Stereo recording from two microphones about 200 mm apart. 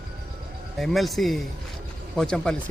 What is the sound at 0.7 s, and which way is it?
Speech, centre (ahead or behind).